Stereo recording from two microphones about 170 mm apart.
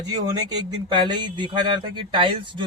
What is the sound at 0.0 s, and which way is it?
Speech, 25° right (ahead or behind).